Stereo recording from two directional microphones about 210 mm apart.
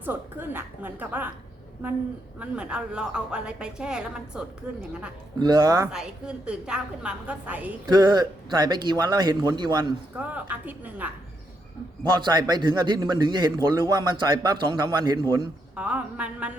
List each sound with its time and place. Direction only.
0.0 s a woman's voice: 10° right (ahead or behind)
2.4 s a woman's voice: 5° right (ahead or behind)
5.4 s a woman's voice: 20° right (ahead or behind)
5.9 s a woman's voice: 5° right (ahead or behind)
7.9 s a man's voice: 20° right (ahead or behind)
10.2 s a woman's voice: 5° right (ahead or behind)
12.2 s a man's voice: 20° right (ahead or behind)
15.7 s a woman's voice: 5° right (ahead or behind)